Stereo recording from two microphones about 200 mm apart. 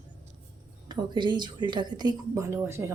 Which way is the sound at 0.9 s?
20° right (ahead or behind).